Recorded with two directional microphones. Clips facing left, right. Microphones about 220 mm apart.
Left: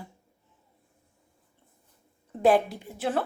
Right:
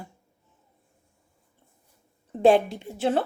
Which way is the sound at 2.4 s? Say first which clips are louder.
Right 3 dB; 25° right (ahead or behind).